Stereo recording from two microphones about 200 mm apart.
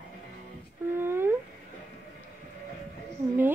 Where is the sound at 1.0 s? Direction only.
10° right (ahead or behind).